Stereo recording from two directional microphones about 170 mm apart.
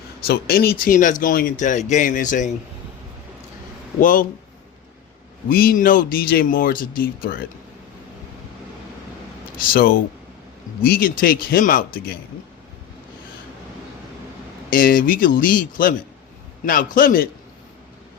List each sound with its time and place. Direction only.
0.3 s speech: 65° left (ahead or behind); by 2.5 s 50° left (ahead or behind)
4.0 s speech: 55° left (ahead or behind)
5.5 s speech: 60° left (ahead or behind)
9.6 s speech: 60° left (ahead or behind)
14.7 s speech: 55° left (ahead or behind)